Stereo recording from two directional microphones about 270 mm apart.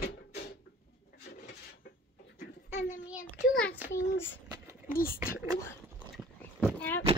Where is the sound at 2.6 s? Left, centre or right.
Left.